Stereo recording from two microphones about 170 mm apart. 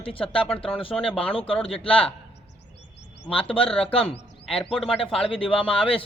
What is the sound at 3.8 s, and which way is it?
A man's voice, 35° left (ahead or behind).